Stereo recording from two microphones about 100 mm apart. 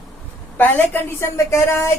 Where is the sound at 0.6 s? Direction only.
25° left (ahead or behind).